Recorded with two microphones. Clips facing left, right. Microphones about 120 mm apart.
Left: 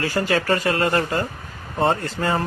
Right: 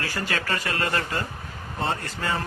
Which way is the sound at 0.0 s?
30° left (ahead or behind).